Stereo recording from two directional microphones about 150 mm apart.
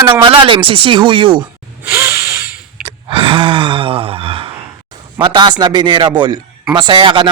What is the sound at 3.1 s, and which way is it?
Gasp, 35° right (ahead or behind).